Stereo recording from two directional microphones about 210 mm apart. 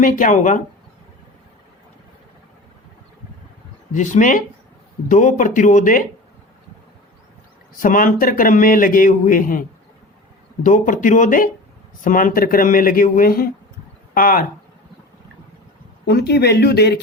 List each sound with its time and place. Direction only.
0.0 s a man's voice: 40° left (ahead or behind)
3.9 s a man's voice: 35° left (ahead or behind)
7.8 s a man's voice: 40° left (ahead or behind)
16.0 s speech: 50° left (ahead or behind)